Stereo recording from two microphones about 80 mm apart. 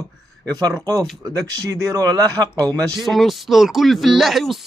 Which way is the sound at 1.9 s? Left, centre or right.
Right.